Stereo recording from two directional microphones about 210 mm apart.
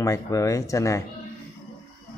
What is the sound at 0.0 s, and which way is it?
Speech, 15° left (ahead or behind).